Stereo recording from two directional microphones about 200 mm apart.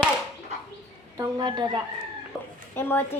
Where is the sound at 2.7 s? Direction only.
10° left (ahead or behind).